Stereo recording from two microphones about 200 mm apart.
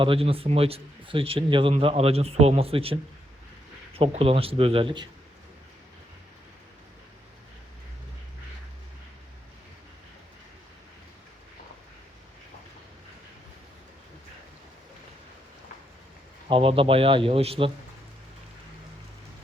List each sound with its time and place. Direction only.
0.0 s speech: 25° right (ahead or behind)
16.5 s speech: 25° right (ahead or behind)